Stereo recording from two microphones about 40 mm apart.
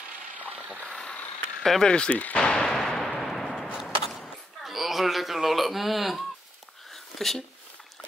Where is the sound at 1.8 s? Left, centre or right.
Left.